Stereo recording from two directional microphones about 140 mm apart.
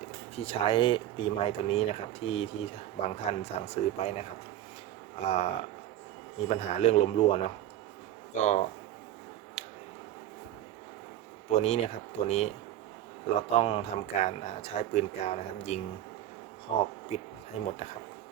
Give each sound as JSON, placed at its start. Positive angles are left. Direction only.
{"t": 0.3, "sound": "speech", "side_deg": 45}
{"t": 6.5, "sound": "speech", "side_deg": 50}
{"t": 8.4, "sound": "speech", "side_deg": 60}
{"t": 9.6, "sound": "a sound", "side_deg": 55}
{"t": 11.4, "sound": "speech", "side_deg": 50}